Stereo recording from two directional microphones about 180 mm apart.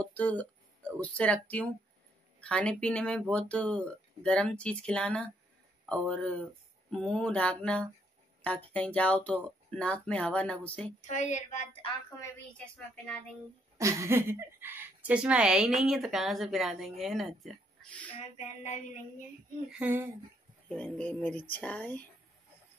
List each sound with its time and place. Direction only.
0.0 s speech: 10° left (ahead or behind)
11.0 s a woman's voice: 40° left (ahead or behind)
12.2 s speech: 5° left (ahead or behind)
13.7 s speech: 15° right (ahead or behind); by 18.1 s 5° left (ahead or behind)
18.6 s a sound: 45° left (ahead or behind)
19.7 s speech: 10° right (ahead or behind)
20.6 s speech: 5° left (ahead or behind)